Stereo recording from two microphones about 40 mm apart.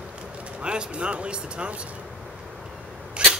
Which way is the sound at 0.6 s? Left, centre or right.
Right.